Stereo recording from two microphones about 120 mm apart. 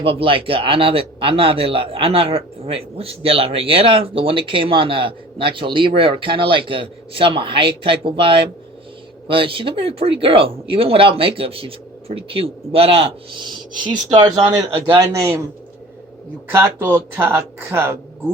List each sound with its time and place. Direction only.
0.0 s speech: 50° right (ahead or behind)
14.8 s speech: 30° right (ahead or behind)
16.6 s speech: 15° right (ahead or behind)